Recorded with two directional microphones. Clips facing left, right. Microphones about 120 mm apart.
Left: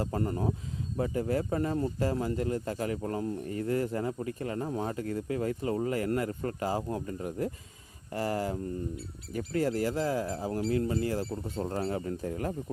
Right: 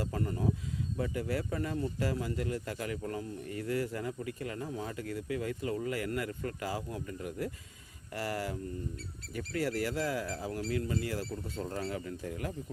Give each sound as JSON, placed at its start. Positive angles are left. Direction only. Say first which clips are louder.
{"t": 0.0, "sound": "speech", "louder": "left 3 dB", "side_deg": 40}
{"t": 9.7, "sound": "speech", "louder": "left 4 dB", "side_deg": 30}
{"t": 11.2, "sound": "speech", "louder": "left 4 dB", "side_deg": 20}
{"t": 11.7, "sound": "speech", "louder": "left 6 dB", "side_deg": 35}